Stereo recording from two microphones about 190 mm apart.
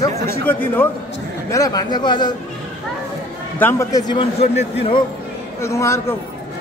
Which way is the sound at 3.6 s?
15° left (ahead or behind).